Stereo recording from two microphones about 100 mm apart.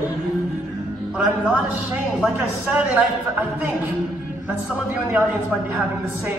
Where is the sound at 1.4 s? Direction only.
15° right (ahead or behind).